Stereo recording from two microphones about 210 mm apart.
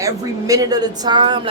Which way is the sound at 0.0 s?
15° right (ahead or behind).